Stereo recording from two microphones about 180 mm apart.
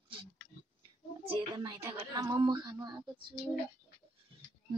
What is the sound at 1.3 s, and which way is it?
A woman's voice, 20° right (ahead or behind).